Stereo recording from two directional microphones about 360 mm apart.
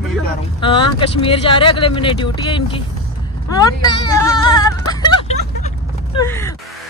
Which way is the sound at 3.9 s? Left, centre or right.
Centre.